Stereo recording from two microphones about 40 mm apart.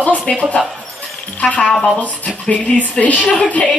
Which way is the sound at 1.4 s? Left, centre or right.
Left.